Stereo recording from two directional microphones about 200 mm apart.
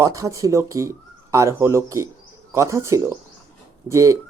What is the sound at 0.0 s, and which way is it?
Speech, 15° right (ahead or behind).